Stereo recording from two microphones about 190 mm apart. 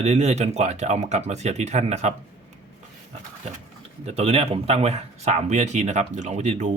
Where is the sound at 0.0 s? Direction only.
35° right (ahead or behind).